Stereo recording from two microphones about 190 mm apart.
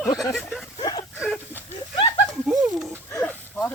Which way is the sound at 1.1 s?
5° right (ahead or behind).